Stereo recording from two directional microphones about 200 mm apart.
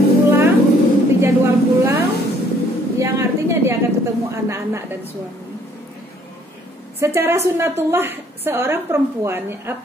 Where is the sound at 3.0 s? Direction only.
15° right (ahead or behind).